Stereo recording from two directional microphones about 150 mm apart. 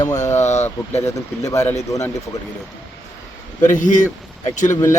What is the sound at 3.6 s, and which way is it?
Speech, 55° left (ahead or behind).